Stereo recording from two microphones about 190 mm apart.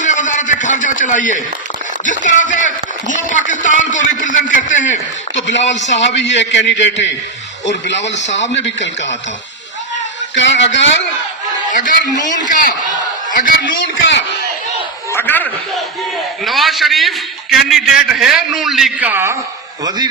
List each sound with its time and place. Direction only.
0.0 s a sound: 40° left (ahead or behind)
2.0 s speech: 40° left (ahead or behind)
5.3 s a man's voice: 70° left (ahead or behind)
10.3 s a man's voice: 70° left (ahead or behind)
11.7 s a man's voice: 40° left (ahead or behind)
15.1 s a sound: 10° left (ahead or behind)
16.4 s a man's voice: centre (ahead or behind)